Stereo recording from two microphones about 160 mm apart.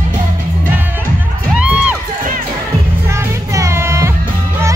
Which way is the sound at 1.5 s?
5° right (ahead or behind).